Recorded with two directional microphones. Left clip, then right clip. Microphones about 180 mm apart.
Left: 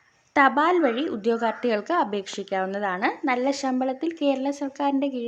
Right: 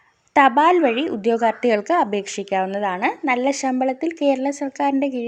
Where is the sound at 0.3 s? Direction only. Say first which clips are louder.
Right 5 dB; 15° right (ahead or behind).